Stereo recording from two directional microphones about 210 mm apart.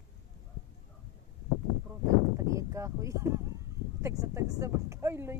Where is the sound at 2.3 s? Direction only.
15° right (ahead or behind).